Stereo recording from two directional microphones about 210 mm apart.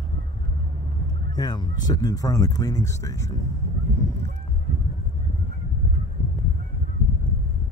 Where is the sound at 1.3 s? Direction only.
20° left (ahead or behind).